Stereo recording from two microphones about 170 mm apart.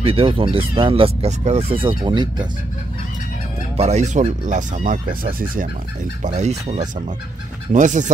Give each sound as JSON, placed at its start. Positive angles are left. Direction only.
{"t": 0.0, "sound": "speech", "side_deg": -35}
{"t": 3.7, "sound": "speech", "side_deg": -40}
{"t": 6.2, "sound": "speech", "side_deg": -40}